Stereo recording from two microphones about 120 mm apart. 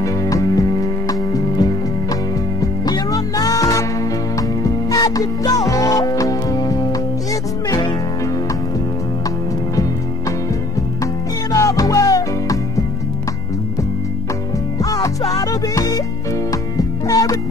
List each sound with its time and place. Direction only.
0.0 s music: 30° left (ahead or behind)
11.5 s music: 30° left (ahead or behind)
14.8 s music: 30° left (ahead or behind)